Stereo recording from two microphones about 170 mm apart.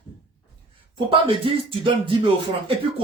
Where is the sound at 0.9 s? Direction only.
30° right (ahead or behind).